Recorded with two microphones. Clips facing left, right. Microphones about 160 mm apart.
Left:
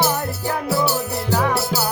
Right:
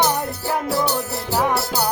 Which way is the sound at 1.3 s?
15° right (ahead or behind).